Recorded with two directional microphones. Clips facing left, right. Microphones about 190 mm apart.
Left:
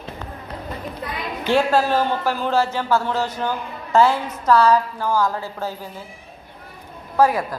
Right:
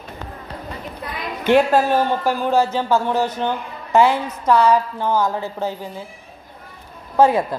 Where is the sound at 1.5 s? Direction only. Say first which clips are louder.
Right 3 dB; 15° right (ahead or behind).